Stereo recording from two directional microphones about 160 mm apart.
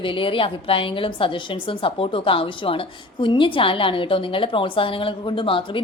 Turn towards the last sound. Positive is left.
turn(degrees=30)  # may be behind; listen again after turning